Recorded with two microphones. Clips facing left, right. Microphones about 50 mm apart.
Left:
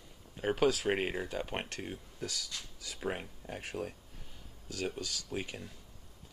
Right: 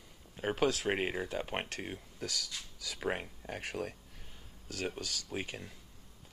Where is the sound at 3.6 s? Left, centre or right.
Right.